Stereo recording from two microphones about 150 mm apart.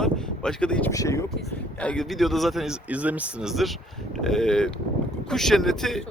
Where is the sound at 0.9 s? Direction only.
20° left (ahead or behind).